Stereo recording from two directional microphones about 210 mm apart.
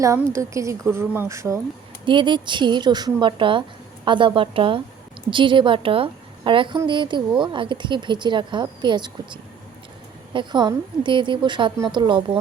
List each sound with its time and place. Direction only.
0.0 s a woman's voice: 15° right (ahead or behind)